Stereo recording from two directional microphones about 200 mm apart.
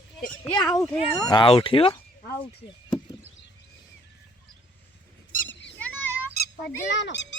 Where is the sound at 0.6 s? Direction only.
5° left (ahead or behind).